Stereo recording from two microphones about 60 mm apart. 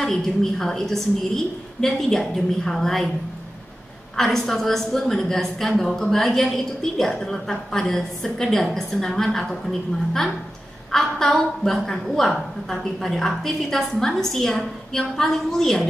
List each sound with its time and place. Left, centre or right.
0.0 s a woman's voice: centre
4.2 s a woman's voice: centre